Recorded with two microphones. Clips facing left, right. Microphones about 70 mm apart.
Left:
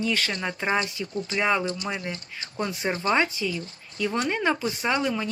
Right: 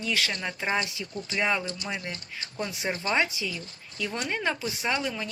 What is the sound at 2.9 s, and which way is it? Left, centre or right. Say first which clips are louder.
Speech: left 3 dB; centre.